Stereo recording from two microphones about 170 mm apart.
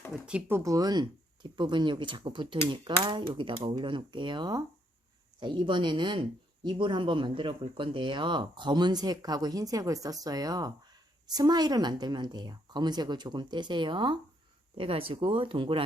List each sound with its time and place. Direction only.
0.3 s speech: 10° right (ahead or behind); by 15.8 s 30° right (ahead or behind)